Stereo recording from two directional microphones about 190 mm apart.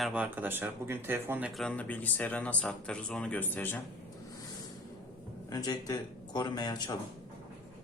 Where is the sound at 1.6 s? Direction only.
10° left (ahead or behind).